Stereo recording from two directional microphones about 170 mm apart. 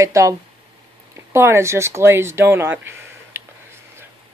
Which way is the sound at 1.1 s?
15° right (ahead or behind).